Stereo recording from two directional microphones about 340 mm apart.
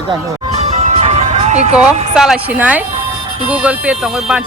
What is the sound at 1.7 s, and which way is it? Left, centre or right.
Speech, centre.